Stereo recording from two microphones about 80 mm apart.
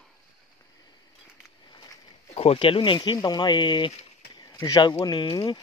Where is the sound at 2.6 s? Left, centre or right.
Left.